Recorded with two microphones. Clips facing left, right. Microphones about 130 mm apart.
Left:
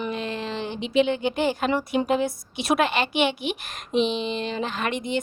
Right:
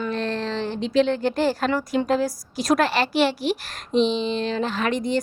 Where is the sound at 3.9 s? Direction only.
5° left (ahead or behind).